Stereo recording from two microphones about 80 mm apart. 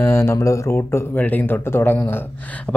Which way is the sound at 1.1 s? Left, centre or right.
Left.